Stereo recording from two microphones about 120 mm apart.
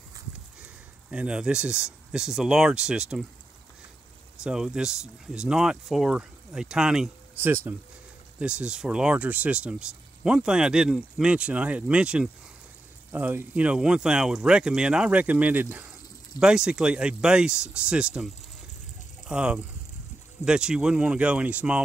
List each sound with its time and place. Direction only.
1.1 s speech: 10° right (ahead or behind)
4.4 s speech: 5° right (ahead or behind)
7.3 s speech: 20° right (ahead or behind)